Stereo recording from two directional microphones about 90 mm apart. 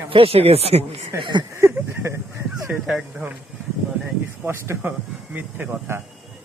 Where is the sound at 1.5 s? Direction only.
30° right (ahead or behind).